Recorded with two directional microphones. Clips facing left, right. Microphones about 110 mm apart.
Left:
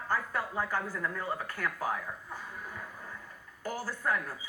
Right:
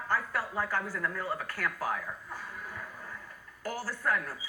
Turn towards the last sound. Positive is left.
turn(degrees=20)  # may be behind; listen again after turning